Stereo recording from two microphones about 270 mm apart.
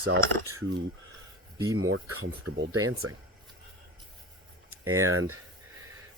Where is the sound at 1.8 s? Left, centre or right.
Right.